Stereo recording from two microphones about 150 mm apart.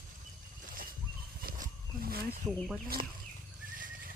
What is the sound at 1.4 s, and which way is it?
Wild animals, 70° right (ahead or behind).